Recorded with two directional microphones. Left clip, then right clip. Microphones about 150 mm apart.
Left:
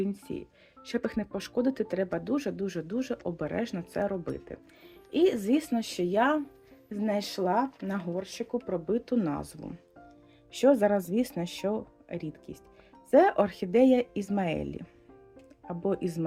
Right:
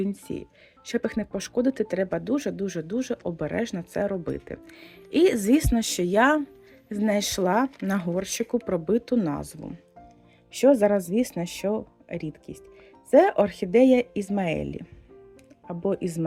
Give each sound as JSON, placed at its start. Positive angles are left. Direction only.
{"t": 0.0, "sound": "speech", "side_deg": -30}
{"t": 4.4, "sound": "speech", "side_deg": -45}
{"t": 9.1, "sound": "speech", "side_deg": -30}